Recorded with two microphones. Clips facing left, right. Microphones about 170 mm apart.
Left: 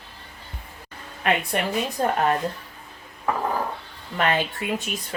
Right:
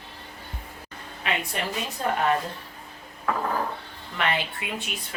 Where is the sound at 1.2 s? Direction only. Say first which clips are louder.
Left 6 dB; 55° left (ahead or behind).